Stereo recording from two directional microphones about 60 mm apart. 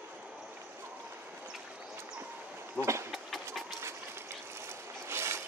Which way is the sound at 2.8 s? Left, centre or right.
Right.